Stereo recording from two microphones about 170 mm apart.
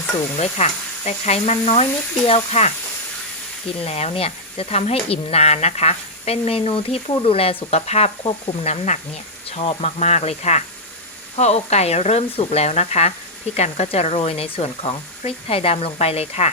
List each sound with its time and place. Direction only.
0.3 s speech: 40° left (ahead or behind)
3.8 s speech: 40° left (ahead or behind)